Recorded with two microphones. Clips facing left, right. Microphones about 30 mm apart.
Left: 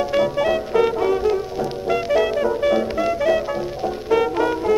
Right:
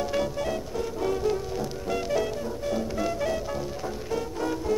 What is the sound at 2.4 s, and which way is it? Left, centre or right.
Music, left.